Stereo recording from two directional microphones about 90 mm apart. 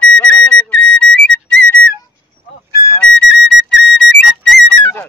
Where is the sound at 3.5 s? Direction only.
Centre (ahead or behind).